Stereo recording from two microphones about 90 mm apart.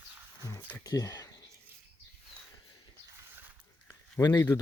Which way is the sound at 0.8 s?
40° left (ahead or behind).